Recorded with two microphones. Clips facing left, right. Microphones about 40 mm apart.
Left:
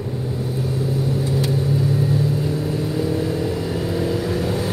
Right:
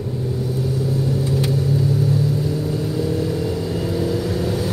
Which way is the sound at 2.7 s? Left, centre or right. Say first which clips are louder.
Even; left.